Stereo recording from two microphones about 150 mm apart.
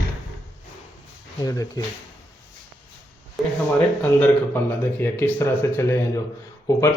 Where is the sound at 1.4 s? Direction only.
20° left (ahead or behind).